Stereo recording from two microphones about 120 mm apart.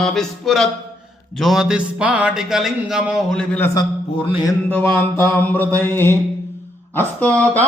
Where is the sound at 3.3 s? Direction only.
10° left (ahead or behind).